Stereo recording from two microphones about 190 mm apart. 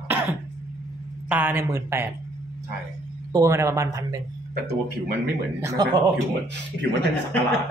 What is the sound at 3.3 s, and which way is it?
Speech, 15° right (ahead or behind).